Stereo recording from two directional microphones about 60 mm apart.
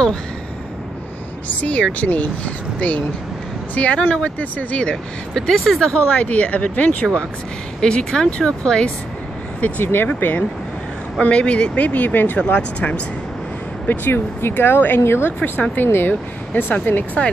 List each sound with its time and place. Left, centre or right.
1.6 s speech: left
6.1 s speech: left
7.8 s speech: centre
9.6 s speech: left
12.4 s speech: left
13.8 s speech: left
15.4 s speech: left